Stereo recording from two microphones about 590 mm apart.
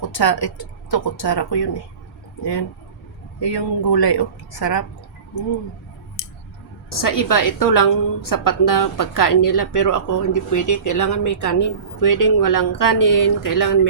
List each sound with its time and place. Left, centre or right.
0.0 s a woman's voice: left
6.9 s a woman's voice: left